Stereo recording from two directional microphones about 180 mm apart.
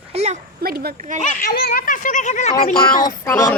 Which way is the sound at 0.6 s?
60° right (ahead or behind).